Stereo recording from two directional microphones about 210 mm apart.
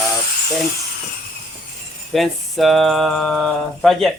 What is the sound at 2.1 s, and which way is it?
Speech, centre (ahead or behind).